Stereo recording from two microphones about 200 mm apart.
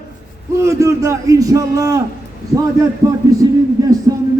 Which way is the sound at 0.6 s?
15° right (ahead or behind).